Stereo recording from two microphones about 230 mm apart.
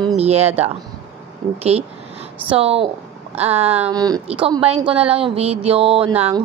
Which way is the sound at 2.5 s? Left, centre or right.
Right.